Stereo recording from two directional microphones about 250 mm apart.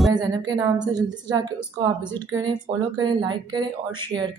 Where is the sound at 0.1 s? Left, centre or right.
Centre.